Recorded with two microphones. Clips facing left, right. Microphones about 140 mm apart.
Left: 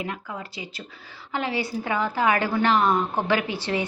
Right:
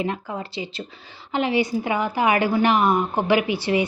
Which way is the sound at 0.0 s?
30° right (ahead or behind).